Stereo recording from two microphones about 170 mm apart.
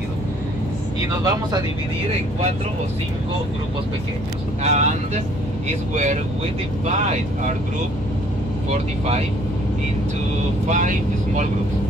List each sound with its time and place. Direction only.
1.1 s speech: 20° right (ahead or behind)
4.6 s speech: 45° right (ahead or behind)
6.9 s speech: 40° right (ahead or behind)
10.7 s speech: 45° right (ahead or behind)